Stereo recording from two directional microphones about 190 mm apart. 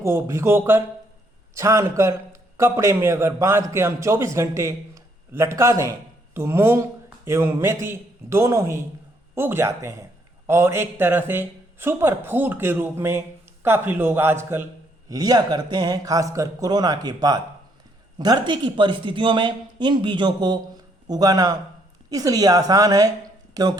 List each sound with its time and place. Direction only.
0.0 s a man's voice: 15° right (ahead or behind)